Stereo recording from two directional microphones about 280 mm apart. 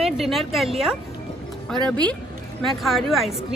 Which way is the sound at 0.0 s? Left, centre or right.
Centre.